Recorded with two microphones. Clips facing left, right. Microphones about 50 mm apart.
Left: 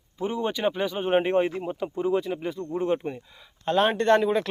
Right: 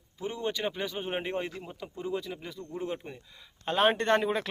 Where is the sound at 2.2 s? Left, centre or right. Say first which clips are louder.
Left 10 dB; left.